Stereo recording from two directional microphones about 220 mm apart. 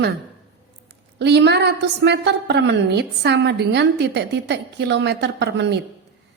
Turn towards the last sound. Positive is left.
turn(degrees=-50)  # may be behind; listen again after turning